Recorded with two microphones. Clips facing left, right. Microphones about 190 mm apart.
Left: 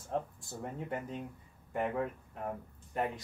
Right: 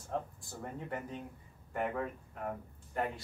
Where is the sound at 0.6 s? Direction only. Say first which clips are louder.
Left 2 dB; 20° left (ahead or behind).